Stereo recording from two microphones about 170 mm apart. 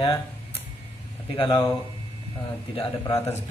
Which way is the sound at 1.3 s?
30° left (ahead or behind).